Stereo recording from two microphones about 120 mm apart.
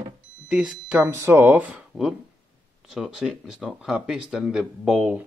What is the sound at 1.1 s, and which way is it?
Speech, 20° right (ahead or behind).